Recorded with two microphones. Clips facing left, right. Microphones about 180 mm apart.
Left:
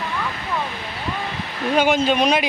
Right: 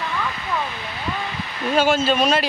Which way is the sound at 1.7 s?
15° left (ahead or behind).